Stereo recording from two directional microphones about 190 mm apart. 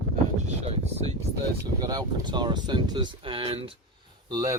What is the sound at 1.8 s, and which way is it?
Speech, 20° right (ahead or behind).